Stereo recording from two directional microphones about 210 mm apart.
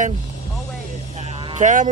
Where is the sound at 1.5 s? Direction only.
35° right (ahead or behind).